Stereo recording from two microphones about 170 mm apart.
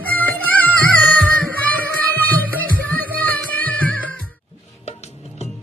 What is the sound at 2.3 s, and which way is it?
Music, 10° left (ahead or behind).